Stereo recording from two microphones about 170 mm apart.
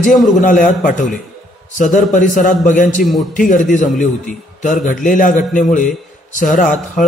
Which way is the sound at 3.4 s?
50° left (ahead or behind).